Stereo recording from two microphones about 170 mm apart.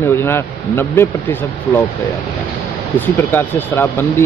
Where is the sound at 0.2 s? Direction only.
15° left (ahead or behind).